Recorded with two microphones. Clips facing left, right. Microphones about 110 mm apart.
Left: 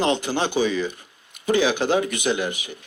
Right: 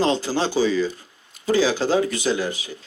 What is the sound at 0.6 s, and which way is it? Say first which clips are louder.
Speech: right 2 dB; 60° left (ahead or behind).